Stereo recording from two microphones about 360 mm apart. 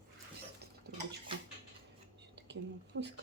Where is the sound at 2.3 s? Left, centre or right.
Right.